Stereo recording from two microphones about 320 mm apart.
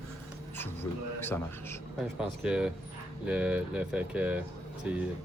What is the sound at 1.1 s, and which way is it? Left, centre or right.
A man's voice, centre.